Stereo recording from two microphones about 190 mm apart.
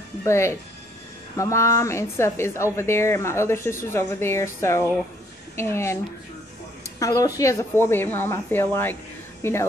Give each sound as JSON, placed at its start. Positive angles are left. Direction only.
{"t": 0.2, "sound": "a woman's voice", "side_deg": 15}
{"t": 7.0, "sound": "a woman's voice", "side_deg": 15}